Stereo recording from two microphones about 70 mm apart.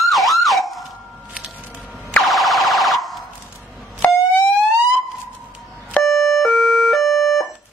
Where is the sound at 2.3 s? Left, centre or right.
Centre.